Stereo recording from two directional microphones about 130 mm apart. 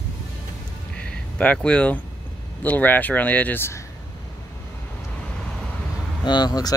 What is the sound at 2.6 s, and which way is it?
Speech, 10° left (ahead or behind).